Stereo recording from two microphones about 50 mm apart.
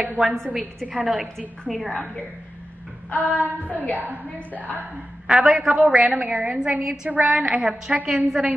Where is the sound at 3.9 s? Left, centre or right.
Right.